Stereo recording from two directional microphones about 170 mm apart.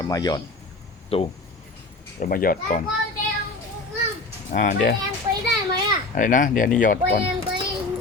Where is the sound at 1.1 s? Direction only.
35° left (ahead or behind).